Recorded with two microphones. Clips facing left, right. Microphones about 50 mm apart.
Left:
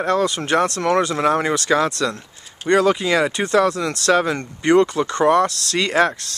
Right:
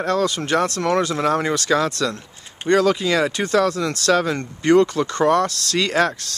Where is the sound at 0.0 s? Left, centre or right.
Centre.